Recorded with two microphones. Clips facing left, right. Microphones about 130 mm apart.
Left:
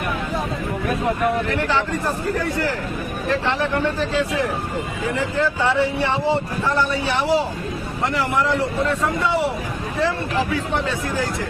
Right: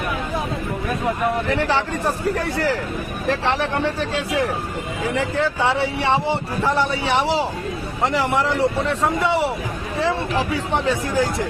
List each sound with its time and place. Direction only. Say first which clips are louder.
5.1 s speech: even; 75° right (ahead or behind)